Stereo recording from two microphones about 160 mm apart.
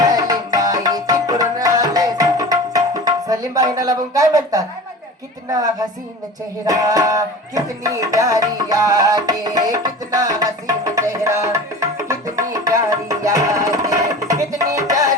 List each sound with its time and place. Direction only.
0.0 s tabla: 25° right (ahead or behind)
5.5 s music: 20° right (ahead or behind)